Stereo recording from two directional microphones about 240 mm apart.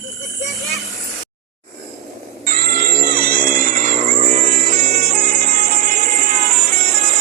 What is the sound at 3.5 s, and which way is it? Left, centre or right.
Music, right.